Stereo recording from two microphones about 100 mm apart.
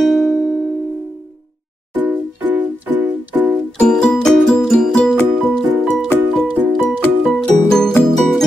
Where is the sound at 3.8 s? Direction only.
5° left (ahead or behind).